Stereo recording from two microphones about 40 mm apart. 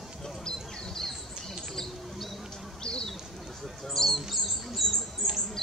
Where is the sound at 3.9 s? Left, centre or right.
Centre.